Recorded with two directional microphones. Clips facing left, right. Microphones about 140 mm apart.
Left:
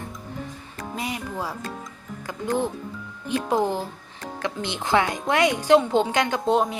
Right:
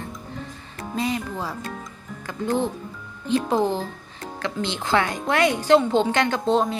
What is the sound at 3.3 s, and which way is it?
Speech, 15° left (ahead or behind).